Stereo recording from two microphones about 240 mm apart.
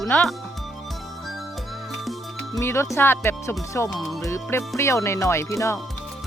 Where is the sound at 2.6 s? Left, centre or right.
Centre.